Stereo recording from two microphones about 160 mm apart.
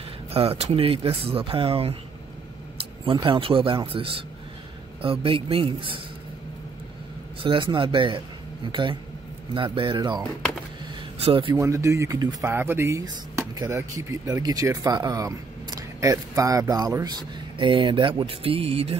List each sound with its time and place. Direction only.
0.3 s speech: 35° right (ahead or behind)
7.4 s speech: 30° right (ahead or behind)
9.5 s speech: 30° right (ahead or behind)
11.5 s speech: 20° right (ahead or behind); by 18.9 s 35° right (ahead or behind)